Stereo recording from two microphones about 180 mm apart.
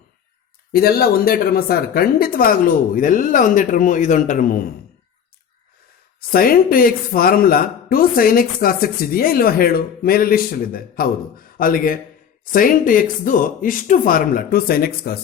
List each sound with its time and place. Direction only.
0.7 s speech: 60° left (ahead or behind)
6.1 s speech: 55° left (ahead or behind)